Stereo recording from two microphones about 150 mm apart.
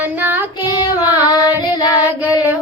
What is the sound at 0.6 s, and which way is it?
Child singing, 25° left (ahead or behind).